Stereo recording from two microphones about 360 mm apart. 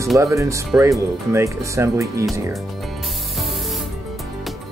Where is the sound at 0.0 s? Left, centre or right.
Centre.